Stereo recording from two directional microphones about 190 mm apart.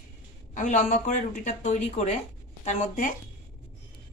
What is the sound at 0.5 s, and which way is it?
Speech, 40° left (ahead or behind).